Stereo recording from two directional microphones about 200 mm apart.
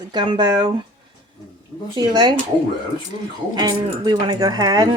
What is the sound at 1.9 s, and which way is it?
Speech, 20° right (ahead or behind).